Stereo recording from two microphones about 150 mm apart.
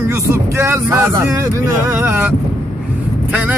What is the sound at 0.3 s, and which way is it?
Speech, 15° right (ahead or behind).